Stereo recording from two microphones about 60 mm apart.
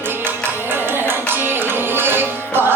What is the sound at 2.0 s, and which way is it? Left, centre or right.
Music, right.